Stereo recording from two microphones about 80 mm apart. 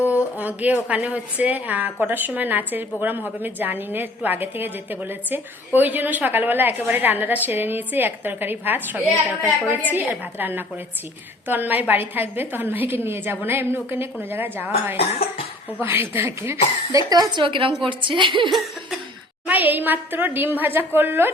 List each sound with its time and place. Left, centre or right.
0.3 s a woman's voice: centre
17.1 s a woman's voice: right
18.5 s cough: centre
19.5 s a woman's voice: right